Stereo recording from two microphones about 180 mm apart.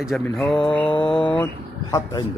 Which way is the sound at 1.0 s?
25° left (ahead or behind).